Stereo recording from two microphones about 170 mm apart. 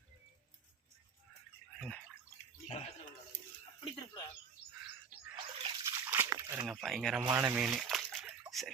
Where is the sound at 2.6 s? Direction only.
40° left (ahead or behind).